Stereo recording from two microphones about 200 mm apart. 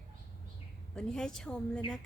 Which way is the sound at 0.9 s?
5° left (ahead or behind).